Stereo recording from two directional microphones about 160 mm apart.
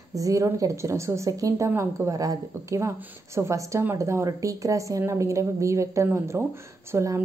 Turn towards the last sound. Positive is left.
turn(degrees=-15)  # may be behind; listen again after turning